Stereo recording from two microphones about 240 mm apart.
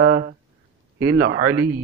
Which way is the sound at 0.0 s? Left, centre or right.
Right.